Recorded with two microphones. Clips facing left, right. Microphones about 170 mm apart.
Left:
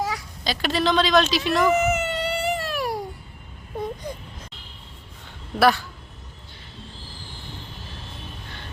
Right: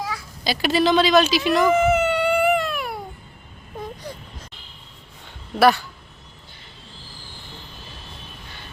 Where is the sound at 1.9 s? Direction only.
40° left (ahead or behind).